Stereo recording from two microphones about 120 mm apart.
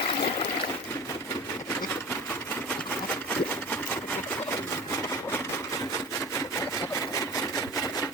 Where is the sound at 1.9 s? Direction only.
20° left (ahead or behind).